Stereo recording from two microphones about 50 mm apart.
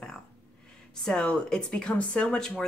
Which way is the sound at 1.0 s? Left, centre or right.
Centre.